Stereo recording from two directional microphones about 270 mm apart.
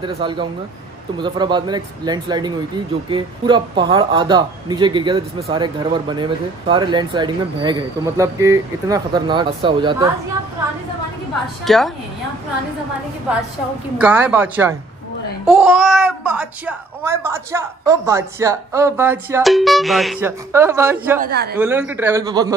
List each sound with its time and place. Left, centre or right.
0.0 s a child's voice: centre
11.6 s speech: centre
13.9 s a child's voice: centre
21.2 s speech: right
21.5 s a child's voice: centre